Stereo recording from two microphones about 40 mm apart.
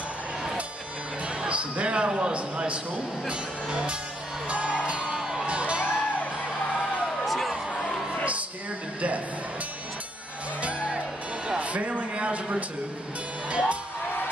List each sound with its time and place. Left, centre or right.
1.4 s music: right
2.0 s a man's voice: right
4.5 s music: right
5.5 s music: right
5.9 s music: left
7.2 s music: centre
10.6 s music: right
11.4 s a sound: right
13.5 s music: right